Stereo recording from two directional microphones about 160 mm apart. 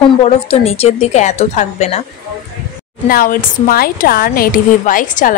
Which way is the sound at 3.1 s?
60° left (ahead or behind).